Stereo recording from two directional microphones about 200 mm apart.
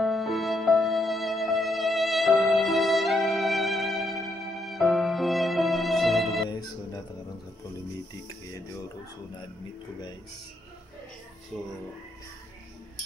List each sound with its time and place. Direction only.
0.0 s music: centre (ahead or behind)
6.5 s music: 20° left (ahead or behind)
11.5 s music: 5° left (ahead or behind)